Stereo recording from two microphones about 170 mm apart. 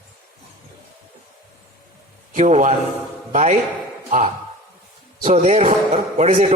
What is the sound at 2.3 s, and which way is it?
A man's voice, 45° right (ahead or behind).